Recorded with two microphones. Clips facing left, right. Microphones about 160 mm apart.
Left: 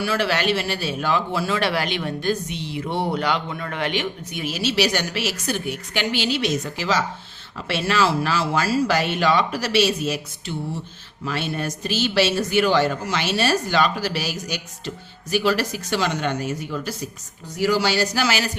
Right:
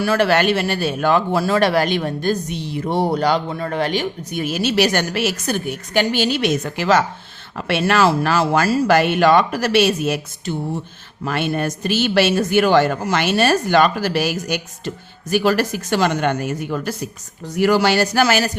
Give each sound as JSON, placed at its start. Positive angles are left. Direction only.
{"t": 0.0, "sound": "a man's voice", "side_deg": -50}